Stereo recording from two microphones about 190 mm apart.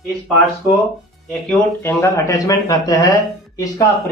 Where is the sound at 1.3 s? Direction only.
5° left (ahead or behind).